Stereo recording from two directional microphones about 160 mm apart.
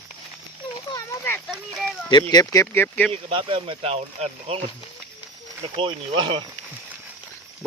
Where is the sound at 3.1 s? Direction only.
35° right (ahead or behind).